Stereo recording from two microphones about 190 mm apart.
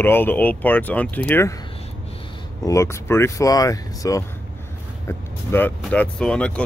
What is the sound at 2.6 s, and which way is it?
Speech, 15° left (ahead or behind).